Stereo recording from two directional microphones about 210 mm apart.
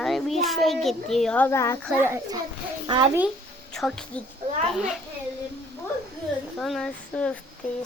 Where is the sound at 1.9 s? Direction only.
10° right (ahead or behind).